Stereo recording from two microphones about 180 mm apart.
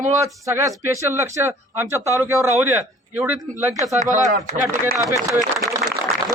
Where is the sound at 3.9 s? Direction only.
45° right (ahead or behind).